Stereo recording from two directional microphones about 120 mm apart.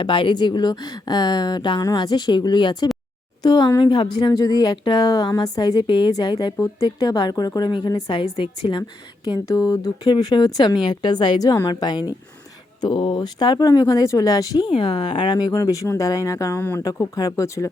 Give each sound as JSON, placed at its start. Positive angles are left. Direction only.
{"t": 0.0, "sound": "a woman's voice", "side_deg": 45}
{"t": 8.2, "sound": "a woman's voice", "side_deg": 45}